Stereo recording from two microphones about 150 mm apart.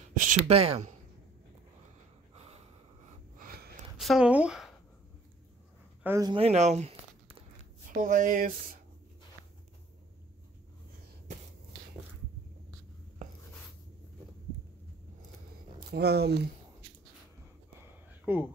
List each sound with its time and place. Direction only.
0.1 s a sound: 65° right (ahead or behind)
0.5 s speech: 40° right (ahead or behind)
2.3 s snort: 45° right (ahead or behind)
3.3 s a sound: 80° right
3.9 s speech: 5° right (ahead or behind)
6.2 s speech: 40° right (ahead or behind)
7.9 s speech: 60° right (ahead or behind)
15.9 s speech: 90° right
18.2 s speech: 15° right (ahead or behind)